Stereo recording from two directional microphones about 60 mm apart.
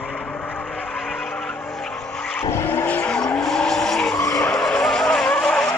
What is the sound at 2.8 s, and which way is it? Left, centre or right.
Vehicle, left.